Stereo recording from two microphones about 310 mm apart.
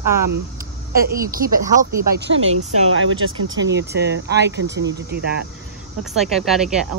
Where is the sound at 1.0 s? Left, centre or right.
Right.